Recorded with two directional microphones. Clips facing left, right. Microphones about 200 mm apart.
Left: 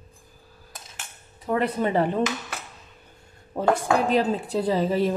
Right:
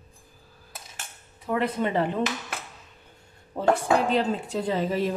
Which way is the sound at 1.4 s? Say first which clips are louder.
Left 2 dB; 40° left (ahead or behind).